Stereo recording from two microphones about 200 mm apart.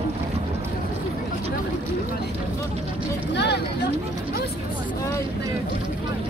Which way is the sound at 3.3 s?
55° left (ahead or behind).